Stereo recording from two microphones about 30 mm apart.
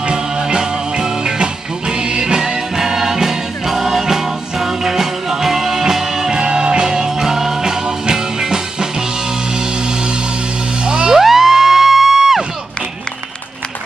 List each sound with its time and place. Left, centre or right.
0.4 s music: right
6.4 s music: right
10.9 s music: right
11.1 s music: centre